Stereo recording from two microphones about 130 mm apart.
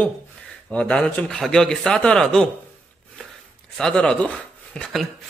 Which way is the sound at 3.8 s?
5° left (ahead or behind).